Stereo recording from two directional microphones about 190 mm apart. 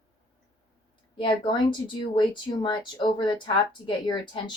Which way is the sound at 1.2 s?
25° left (ahead or behind).